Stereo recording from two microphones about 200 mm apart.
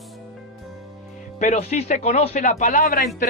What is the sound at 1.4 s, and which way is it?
Speech, 35° left (ahead or behind).